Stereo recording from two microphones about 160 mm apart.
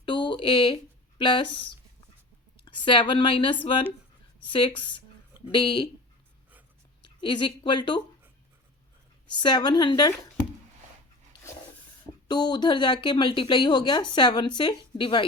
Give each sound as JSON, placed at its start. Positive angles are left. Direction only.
{"t": 0.0, "sound": "a sound", "side_deg": 30}
{"t": 1.2, "sound": "speech", "side_deg": 30}
{"t": 2.6, "sound": "speech", "side_deg": 30}
{"t": 7.0, "sound": "a woman's voice", "side_deg": 30}
{"t": 9.3, "sound": "a woman's voice", "side_deg": 30}
{"t": 12.3, "sound": "a woman's voice", "side_deg": 25}